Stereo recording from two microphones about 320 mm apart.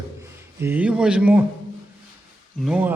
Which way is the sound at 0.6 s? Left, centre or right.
Centre.